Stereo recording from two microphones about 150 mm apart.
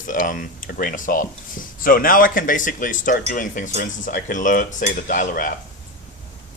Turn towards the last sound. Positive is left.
turn(degrees=60)  # may be behind; listen again after turning